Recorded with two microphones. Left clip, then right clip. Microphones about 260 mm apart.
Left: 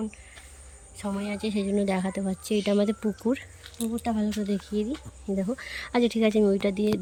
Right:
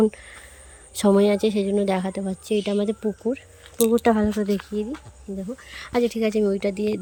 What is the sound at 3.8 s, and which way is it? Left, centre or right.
Speech, right.